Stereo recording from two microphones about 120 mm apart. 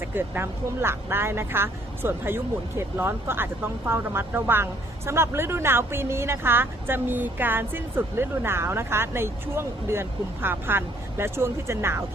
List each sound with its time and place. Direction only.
0.0 s speech: 20° right (ahead or behind)